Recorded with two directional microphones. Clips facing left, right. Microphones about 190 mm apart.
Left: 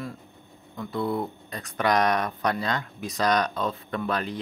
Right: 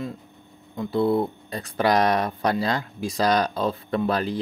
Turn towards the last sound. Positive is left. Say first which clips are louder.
# right 5 dB
turn(degrees=-35)  # may be behind; listen again after turning